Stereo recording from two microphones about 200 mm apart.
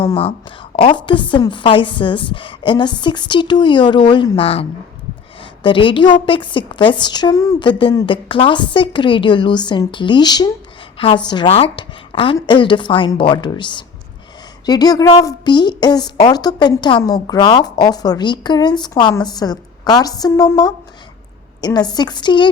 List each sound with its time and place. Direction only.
0.0 s a woman's voice: 25° left (ahead or behind)